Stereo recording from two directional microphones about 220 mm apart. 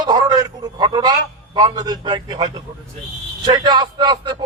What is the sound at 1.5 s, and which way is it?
A man's voice, 20° right (ahead or behind).